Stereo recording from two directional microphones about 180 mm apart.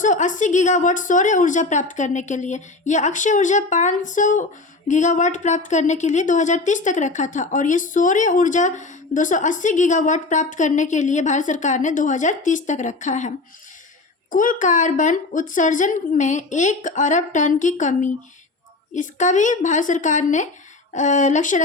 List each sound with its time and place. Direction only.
0.0 s speech: 45° left (ahead or behind)